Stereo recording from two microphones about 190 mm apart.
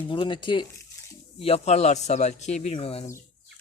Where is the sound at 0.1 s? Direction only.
25° left (ahead or behind).